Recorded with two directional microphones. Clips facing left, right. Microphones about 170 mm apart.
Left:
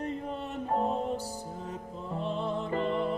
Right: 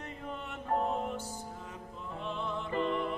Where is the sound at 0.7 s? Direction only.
35° left (ahead or behind).